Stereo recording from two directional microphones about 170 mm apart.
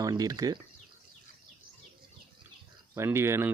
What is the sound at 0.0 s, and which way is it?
Speech, 20° right (ahead or behind).